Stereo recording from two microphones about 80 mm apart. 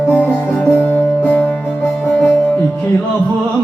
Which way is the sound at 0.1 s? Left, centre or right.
Left.